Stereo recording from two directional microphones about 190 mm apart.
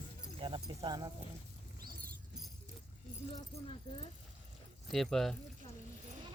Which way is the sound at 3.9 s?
35° left (ahead or behind).